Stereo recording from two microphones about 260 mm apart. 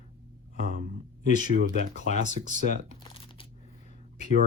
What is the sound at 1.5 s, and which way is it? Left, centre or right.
Speech, right.